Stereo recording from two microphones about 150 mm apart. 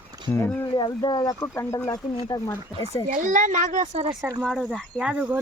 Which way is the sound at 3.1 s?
60° right (ahead or behind).